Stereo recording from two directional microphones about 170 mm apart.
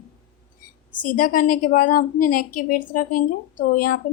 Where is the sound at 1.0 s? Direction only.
55° left (ahead or behind).